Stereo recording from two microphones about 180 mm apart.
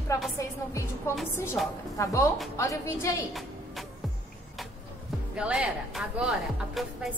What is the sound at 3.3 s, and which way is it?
Music, centre (ahead or behind).